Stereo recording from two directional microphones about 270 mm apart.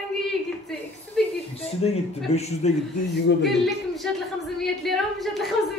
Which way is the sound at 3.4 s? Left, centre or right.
Centre.